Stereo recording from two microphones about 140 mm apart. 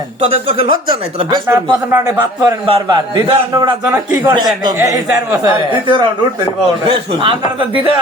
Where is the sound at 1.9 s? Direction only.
20° right (ahead or behind).